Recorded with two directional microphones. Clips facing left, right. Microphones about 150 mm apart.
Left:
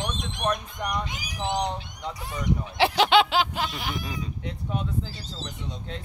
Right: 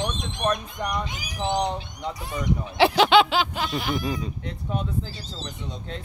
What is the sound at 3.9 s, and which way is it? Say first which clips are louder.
Speech: right 7 dB; 40° right (ahead or behind).